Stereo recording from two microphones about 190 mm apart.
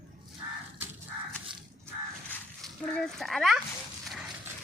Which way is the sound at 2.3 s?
Centre (ahead or behind).